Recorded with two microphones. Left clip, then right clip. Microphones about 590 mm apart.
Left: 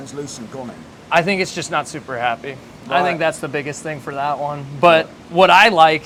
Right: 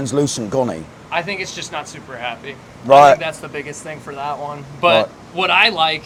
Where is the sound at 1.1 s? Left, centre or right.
Left.